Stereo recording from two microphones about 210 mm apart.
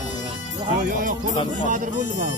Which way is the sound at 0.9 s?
40° right (ahead or behind).